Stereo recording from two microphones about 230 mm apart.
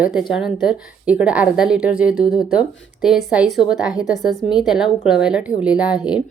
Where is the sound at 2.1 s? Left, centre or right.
Left.